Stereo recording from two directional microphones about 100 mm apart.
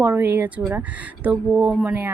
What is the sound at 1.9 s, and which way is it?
Speech, 20° right (ahead or behind).